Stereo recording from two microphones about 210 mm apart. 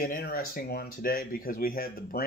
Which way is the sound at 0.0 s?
45° left (ahead or behind).